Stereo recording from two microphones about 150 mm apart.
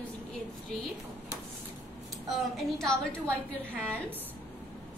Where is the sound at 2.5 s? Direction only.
5° left (ahead or behind).